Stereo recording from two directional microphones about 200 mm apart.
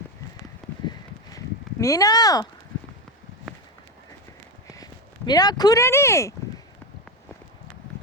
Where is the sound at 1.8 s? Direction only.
15° left (ahead or behind).